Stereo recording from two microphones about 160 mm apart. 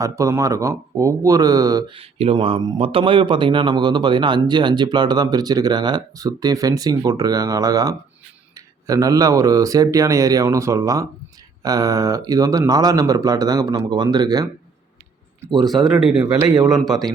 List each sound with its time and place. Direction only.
0.0 s speech: 20° right (ahead or behind)
2.0 s speech: 35° right (ahead or behind)
15.6 s speech: centre (ahead or behind)
16.2 s speech: 25° right (ahead or behind)